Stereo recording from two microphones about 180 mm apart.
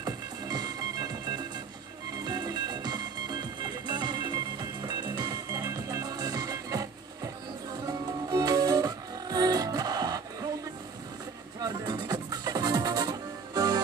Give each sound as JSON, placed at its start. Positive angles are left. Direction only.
{"t": 0.0, "sound": "music", "side_deg": -20}
{"t": 11.6, "sound": "music", "side_deg": -25}